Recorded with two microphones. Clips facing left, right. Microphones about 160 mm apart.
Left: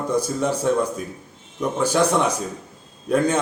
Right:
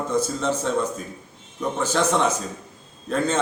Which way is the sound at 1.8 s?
10° left (ahead or behind).